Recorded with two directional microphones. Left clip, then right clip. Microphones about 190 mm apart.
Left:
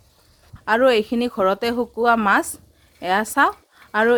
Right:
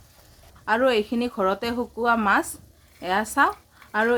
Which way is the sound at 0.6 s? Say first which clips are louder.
Left 4 dB; 45° left (ahead or behind).